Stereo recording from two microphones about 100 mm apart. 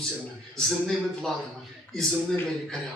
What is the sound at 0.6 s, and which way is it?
Speech, centre (ahead or behind).